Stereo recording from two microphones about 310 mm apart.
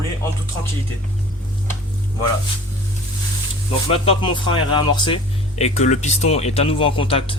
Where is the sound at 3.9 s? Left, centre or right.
Centre.